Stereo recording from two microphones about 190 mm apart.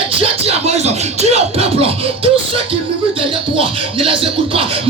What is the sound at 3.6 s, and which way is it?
Speech, 30° right (ahead or behind).